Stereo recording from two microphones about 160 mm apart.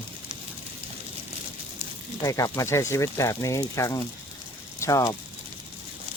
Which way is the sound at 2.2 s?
20° left (ahead or behind).